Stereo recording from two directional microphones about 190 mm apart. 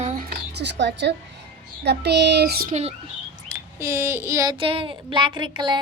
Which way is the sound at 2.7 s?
35° right (ahead or behind).